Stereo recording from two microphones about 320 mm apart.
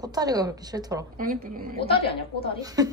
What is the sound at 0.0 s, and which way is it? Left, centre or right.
A woman's voice, centre.